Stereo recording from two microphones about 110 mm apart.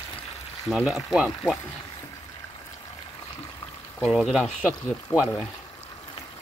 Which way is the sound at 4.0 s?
Centre (ahead or behind).